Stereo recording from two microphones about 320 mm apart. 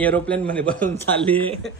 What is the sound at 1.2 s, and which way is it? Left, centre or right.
Speech, centre.